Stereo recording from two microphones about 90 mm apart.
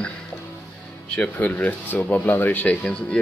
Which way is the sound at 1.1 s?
15° left (ahead or behind).